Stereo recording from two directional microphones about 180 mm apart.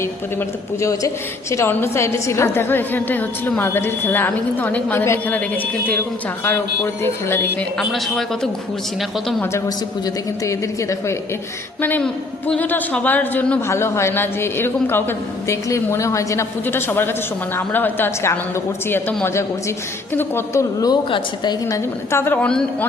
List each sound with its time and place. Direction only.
0.0 s a man's voice: 15° left (ahead or behind)
7.8 s a man's voice: centre (ahead or behind)
9.4 s a man's voice: 15° left (ahead or behind)